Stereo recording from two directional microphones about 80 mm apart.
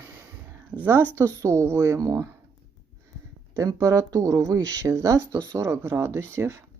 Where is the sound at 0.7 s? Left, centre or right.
Right.